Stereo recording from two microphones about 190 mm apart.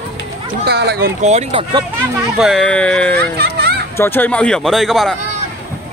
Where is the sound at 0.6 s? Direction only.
60° right (ahead or behind).